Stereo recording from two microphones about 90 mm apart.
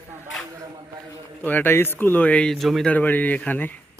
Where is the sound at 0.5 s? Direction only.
40° right (ahead or behind).